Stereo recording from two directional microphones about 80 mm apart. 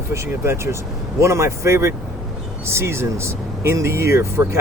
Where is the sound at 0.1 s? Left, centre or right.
Right.